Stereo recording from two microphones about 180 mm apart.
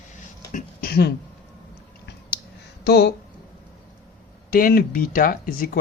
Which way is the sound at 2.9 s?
65° left (ahead or behind).